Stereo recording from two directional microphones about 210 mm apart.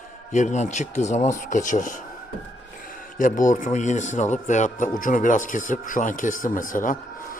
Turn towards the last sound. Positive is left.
turn(degrees=40)  # may be behind; listen again after turning